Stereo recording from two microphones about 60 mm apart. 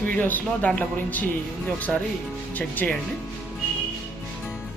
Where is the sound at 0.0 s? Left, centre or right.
Left.